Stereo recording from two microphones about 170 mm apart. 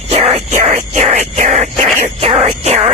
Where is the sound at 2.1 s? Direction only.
35° right (ahead or behind).